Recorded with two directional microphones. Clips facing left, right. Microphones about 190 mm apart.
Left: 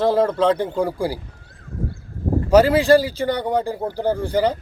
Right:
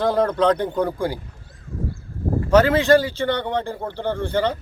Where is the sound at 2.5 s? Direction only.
10° left (ahead or behind).